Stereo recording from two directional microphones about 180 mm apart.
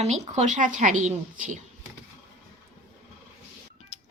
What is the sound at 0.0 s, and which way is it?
A woman's voice, 40° right (ahead or behind).